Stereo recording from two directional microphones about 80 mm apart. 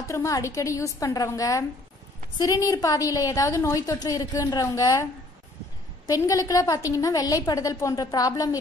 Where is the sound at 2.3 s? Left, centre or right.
Left.